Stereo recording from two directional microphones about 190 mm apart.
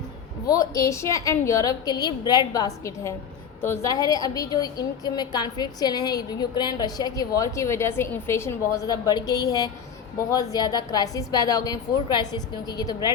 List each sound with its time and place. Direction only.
0.4 s a woman's voice: 20° left (ahead or behind)